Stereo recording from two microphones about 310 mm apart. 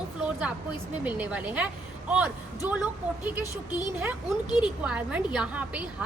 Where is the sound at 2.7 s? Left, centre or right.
Centre.